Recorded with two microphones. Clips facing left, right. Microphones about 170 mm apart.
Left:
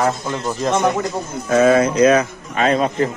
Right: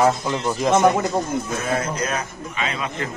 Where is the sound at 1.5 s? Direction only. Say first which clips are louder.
Left 11 dB; 90° left.